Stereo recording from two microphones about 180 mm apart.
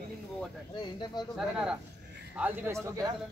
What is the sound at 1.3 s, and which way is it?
A man's voice, 5° right (ahead or behind).